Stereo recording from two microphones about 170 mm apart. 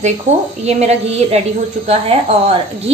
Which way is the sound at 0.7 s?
40° right (ahead or behind).